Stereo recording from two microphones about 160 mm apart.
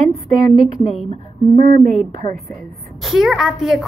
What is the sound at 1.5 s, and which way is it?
Speech, 50° right (ahead or behind).